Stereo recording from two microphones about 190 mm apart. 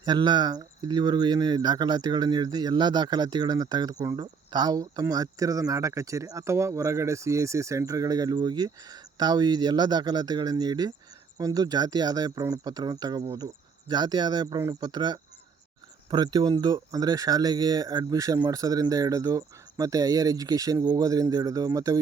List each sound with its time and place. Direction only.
0.0 s speech: 25° right (ahead or behind)